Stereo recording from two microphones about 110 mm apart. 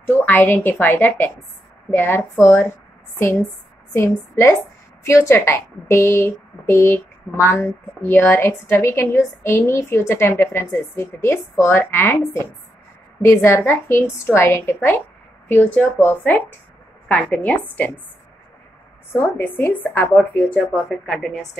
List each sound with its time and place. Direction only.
0.0 s a woman's voice: 15° left (ahead or behind)
3.9 s a woman's voice: 25° left (ahead or behind)
13.2 s a woman's voice: 25° left (ahead or behind)
19.1 s speech: 20° left (ahead or behind)